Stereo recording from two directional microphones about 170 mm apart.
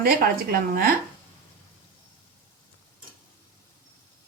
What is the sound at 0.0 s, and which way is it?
Speech, 60° right (ahead or behind).